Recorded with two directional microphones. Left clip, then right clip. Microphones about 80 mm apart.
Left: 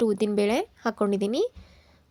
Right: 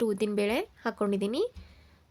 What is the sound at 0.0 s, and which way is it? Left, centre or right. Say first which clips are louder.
Speech: left 4 dB; left.